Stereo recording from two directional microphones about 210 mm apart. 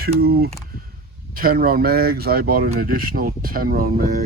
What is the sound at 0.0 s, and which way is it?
Speech, 45° right (ahead or behind).